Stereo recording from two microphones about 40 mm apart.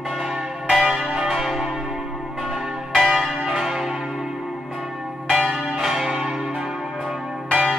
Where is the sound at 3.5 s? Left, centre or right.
Centre.